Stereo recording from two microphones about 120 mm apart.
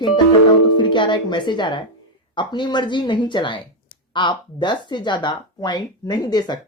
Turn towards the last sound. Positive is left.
turn(degrees=35)  # may be behind; listen again after turning